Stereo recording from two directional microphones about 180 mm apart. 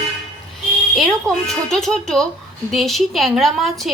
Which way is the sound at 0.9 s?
Centre (ahead or behind).